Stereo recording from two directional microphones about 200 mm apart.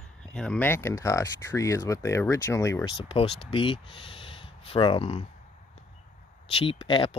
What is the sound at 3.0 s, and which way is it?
Speech, 30° left (ahead or behind).